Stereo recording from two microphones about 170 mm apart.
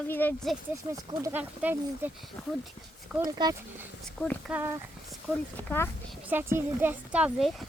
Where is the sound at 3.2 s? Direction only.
20° right (ahead or behind).